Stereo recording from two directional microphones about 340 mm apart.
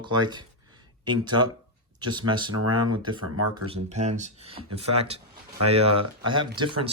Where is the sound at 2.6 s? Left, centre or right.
Right.